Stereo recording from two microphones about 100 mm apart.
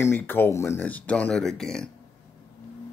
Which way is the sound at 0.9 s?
15° left (ahead or behind).